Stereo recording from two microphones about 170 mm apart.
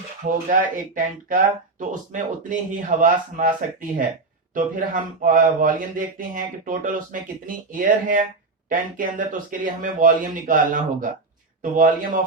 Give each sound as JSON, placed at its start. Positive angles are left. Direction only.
{"t": 0.5, "sound": "a man's voice", "side_deg": -55}